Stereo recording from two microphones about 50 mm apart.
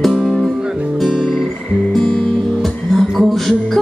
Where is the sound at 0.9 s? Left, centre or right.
Centre.